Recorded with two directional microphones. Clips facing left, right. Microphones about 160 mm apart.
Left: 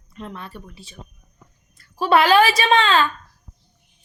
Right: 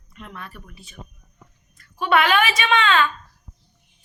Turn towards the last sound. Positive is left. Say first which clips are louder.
# left 2 dB
turn(degrees=30)  # may be behind; listen again after turning